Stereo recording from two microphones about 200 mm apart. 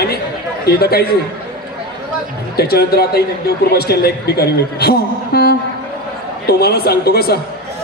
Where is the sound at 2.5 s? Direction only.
50° left (ahead or behind).